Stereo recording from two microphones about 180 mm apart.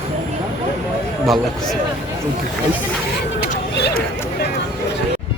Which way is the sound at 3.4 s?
60° left (ahead or behind).